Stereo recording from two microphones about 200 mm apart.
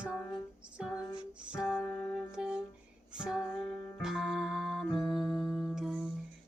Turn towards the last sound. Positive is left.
turn(degrees=-5)  # may be behind; listen again after turning